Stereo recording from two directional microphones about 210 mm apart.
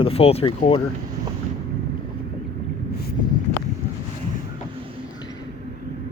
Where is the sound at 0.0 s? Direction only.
30° left (ahead or behind).